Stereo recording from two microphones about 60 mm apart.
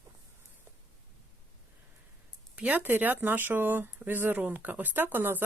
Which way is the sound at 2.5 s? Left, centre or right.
Right.